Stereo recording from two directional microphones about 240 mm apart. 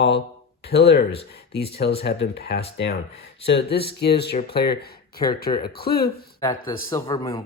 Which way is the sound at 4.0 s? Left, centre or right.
Left.